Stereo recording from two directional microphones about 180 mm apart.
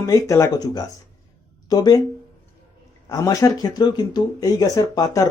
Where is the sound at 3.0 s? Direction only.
20° left (ahead or behind).